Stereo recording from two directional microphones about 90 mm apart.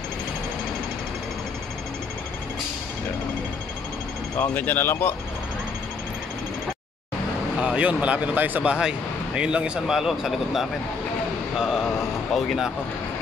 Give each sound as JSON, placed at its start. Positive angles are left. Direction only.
{"t": 4.4, "sound": "speech", "side_deg": 20}
{"t": 7.6, "sound": "speech", "side_deg": -15}
{"t": 11.5, "sound": "a sound", "side_deg": -5}
{"t": 12.4, "sound": "speech", "side_deg": 0}